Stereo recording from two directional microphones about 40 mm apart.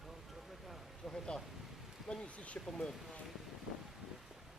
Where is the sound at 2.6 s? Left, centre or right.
Centre.